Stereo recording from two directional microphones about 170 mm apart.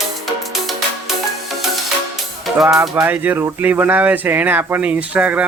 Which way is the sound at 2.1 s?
Centre (ahead or behind).